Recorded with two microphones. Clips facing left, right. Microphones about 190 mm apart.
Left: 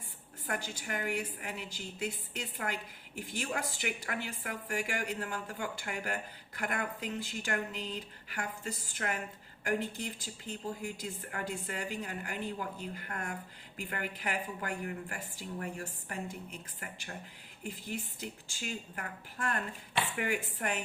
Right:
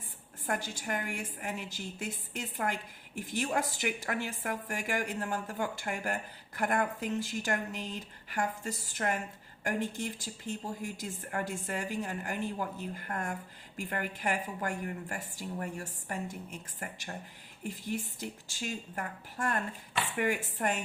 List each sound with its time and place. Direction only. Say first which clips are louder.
0.4 s a woman's voice: right 3 dB; 45° right (ahead or behind)